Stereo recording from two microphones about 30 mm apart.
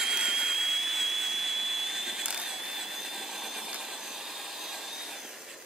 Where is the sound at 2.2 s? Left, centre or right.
Right.